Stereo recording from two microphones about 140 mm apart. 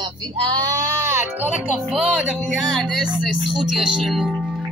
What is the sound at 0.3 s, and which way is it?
Sheep, 35° right (ahead or behind).